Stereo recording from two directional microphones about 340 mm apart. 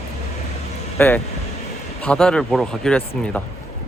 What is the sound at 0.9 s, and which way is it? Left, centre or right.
Speech, centre.